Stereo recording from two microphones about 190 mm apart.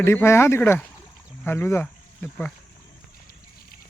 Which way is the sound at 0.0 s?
10° left (ahead or behind).